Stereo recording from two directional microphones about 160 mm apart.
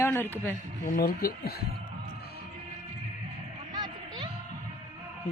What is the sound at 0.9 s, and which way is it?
Speech, 60° left (ahead or behind).